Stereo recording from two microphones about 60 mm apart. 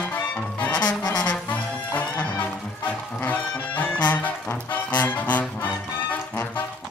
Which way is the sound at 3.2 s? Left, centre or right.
Left.